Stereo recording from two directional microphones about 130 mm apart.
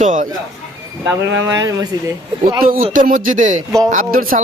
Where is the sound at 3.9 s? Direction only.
90° right.